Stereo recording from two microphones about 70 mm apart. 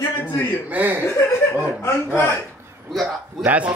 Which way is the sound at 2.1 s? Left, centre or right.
Left.